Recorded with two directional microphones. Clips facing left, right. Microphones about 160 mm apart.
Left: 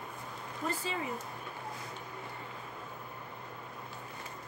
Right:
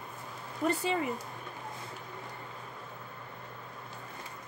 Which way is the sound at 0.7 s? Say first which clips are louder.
Right 7 dB; 65° right (ahead or behind).